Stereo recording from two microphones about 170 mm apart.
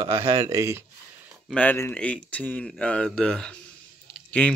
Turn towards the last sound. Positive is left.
turn(degrees=5)  # may be behind; listen again after turning